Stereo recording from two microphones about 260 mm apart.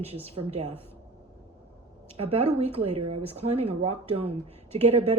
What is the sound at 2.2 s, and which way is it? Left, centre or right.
Speech, right.